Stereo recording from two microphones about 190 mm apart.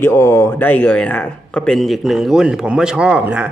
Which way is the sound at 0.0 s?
15° left (ahead or behind).